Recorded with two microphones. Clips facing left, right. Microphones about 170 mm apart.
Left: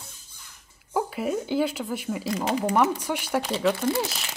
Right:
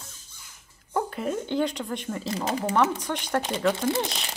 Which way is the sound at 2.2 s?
35° right (ahead or behind).